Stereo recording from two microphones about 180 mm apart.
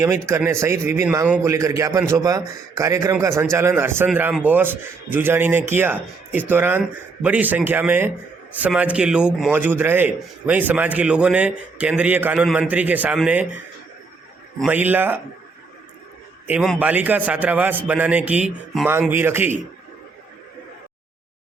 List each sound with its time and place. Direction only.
0.0 s a man's voice: 15° right (ahead or behind)
14.7 s a man's voice: 10° right (ahead or behind)
16.5 s a man's voice: 5° right (ahead or behind)